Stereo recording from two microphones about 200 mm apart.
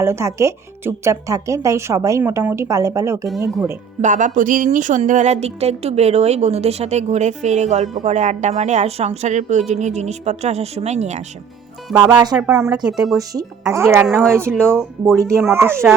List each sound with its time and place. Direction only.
0.0 s speech: 15° right (ahead or behind)
4.0 s speech: 40° right (ahead or behind)
11.9 s speech: 15° right (ahead or behind)
12.8 s speech: centre (ahead or behind)
13.1 s speech: 15° right (ahead or behind)
14.8 s speech: 5° left (ahead or behind)
15.3 s speech: 10° right (ahead or behind)